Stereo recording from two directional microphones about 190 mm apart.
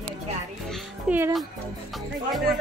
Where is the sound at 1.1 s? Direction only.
5° right (ahead or behind).